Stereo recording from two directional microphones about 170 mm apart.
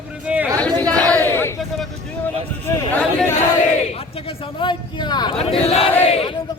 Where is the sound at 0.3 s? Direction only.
10° right (ahead or behind).